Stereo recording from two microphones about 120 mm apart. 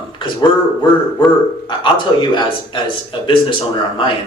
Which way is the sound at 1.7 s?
40° left (ahead or behind).